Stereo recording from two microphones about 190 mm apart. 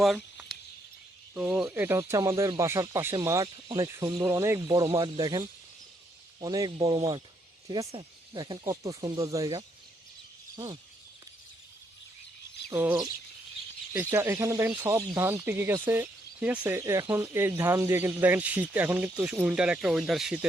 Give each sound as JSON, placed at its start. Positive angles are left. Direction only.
{"t": 0.0, "sound": "a sound", "side_deg": 0}
{"t": 1.3, "sound": "speech", "side_deg": -10}
{"t": 12.7, "sound": "speech", "side_deg": -10}